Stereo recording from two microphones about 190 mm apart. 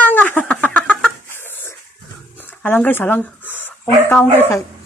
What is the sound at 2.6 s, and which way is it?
Speech, 10° left (ahead or behind).